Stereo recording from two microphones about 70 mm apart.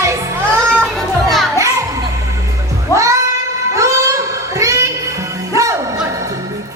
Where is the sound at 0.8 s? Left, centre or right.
Centre.